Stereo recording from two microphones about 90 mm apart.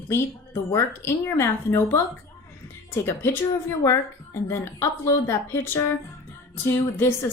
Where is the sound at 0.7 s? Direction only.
30° left (ahead or behind).